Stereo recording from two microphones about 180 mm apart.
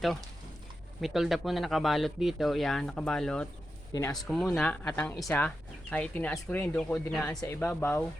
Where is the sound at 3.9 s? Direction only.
20° left (ahead or behind).